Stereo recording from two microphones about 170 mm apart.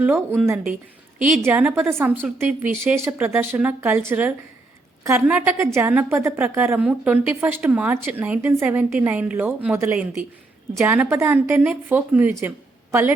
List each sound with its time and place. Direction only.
0.0 s a woman's voice: 10° right (ahead or behind)
10.8 s a woman's voice: 15° right (ahead or behind)